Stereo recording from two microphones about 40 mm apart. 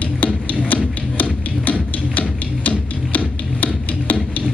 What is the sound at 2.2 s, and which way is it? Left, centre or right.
Music, left.